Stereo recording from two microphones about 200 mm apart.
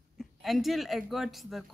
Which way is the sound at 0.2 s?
Centre (ahead or behind).